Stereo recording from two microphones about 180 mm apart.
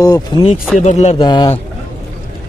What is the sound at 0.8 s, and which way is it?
Speech, 40° left (ahead or behind).